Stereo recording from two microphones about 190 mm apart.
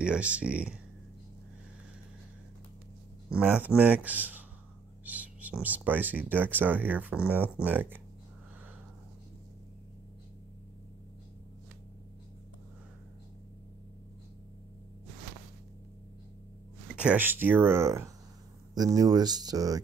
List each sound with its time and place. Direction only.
0.0 s speech: 5° right (ahead or behind)
3.3 s speech: 5° right (ahead or behind)
16.9 s speech: 5° right (ahead or behind)